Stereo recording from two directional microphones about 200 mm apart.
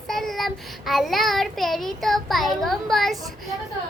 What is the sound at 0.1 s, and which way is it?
A child's voice, centre (ahead or behind).